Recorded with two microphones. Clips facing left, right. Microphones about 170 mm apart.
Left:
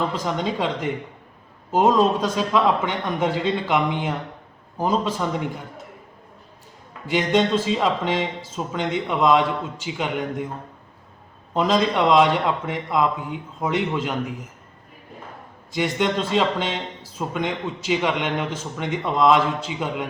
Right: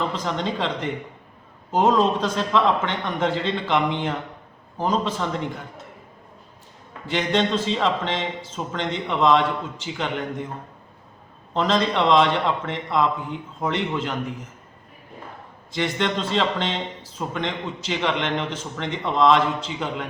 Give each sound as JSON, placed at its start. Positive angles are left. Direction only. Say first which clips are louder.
{"t": 0.3, "sound": "a man's voice", "louder": "left 1 dB", "side_deg": 10}
{"t": 7.1, "sound": "a man's voice", "louder": "left 2 dB", "side_deg": 10}
{"t": 11.5, "sound": "a man's voice", "louder": "left 1 dB", "side_deg": 10}
{"t": 15.7, "sound": "a man's voice", "louder": "left 2 dB", "side_deg": 10}